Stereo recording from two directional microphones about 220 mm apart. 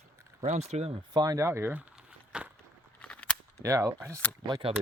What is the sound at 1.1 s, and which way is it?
Speech, 15° right (ahead or behind).